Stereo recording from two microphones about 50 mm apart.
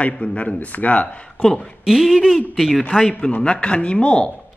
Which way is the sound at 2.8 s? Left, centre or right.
Centre.